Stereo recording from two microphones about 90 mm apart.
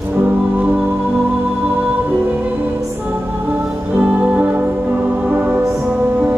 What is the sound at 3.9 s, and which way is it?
Music, 15° right (ahead or behind).